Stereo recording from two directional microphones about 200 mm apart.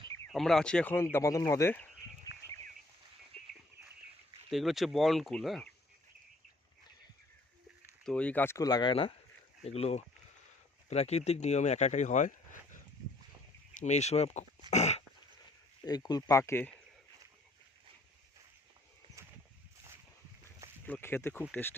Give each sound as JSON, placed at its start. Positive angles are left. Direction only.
{"t": 0.3, "sound": "speech", "side_deg": 0}
{"t": 3.3, "sound": "a sound", "side_deg": -30}
{"t": 4.5, "sound": "speech", "side_deg": 0}
{"t": 8.0, "sound": "speech", "side_deg": 5}
{"t": 14.7, "sound": "dog", "side_deg": 35}
{"t": 15.8, "sound": "speech", "side_deg": 20}
{"t": 20.8, "sound": "speech", "side_deg": 10}